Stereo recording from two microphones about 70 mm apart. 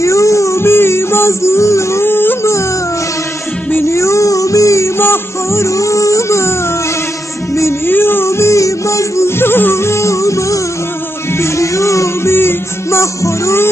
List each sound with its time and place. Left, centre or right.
0.0 s music: left
3.8 s music: left
7.5 s music: left